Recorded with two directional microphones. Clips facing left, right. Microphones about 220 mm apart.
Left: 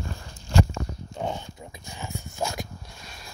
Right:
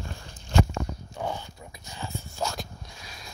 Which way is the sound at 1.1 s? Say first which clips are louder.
Left 2 dB; 20° left (ahead or behind).